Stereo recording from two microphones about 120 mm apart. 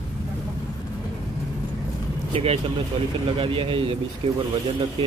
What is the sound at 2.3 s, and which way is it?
Speech, 50° right (ahead or behind).